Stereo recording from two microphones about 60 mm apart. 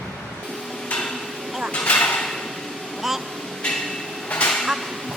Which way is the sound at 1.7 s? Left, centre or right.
Left.